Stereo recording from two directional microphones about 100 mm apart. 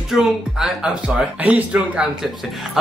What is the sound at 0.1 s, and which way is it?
Speech, 5° right (ahead or behind).